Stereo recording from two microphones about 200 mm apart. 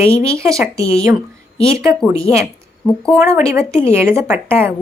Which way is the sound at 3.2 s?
10° right (ahead or behind).